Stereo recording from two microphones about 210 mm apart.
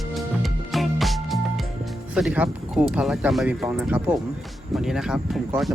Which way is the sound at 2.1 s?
5° right (ahead or behind).